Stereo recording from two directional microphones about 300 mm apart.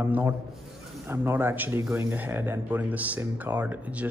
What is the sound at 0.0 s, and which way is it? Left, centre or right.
A man's voice, centre.